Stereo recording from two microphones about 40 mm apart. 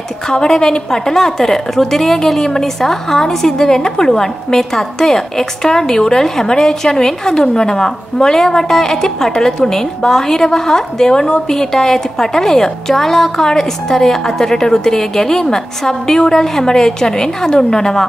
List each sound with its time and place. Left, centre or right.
0.3 s a woman's voice: centre